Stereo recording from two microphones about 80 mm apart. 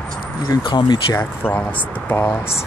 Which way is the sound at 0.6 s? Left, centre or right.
Left.